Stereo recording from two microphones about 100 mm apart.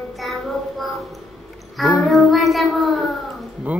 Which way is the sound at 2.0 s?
Centre (ahead or behind).